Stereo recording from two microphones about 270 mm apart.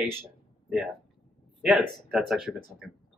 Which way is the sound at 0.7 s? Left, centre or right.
Centre.